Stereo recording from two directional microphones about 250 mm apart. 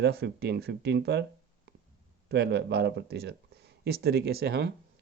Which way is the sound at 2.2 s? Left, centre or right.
Right.